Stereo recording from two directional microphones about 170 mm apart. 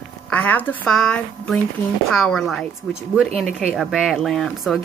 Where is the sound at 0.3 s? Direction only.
10° left (ahead or behind).